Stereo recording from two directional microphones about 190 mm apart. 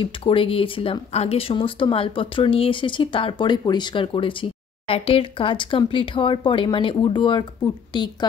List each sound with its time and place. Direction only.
0.0 s speech: 30° left (ahead or behind)